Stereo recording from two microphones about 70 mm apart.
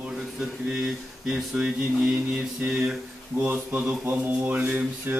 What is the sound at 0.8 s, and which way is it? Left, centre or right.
Speech, centre.